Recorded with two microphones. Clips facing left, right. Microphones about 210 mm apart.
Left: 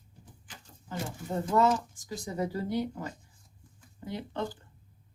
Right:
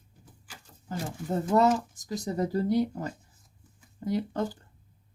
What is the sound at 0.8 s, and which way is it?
Speech, 40° right (ahead or behind).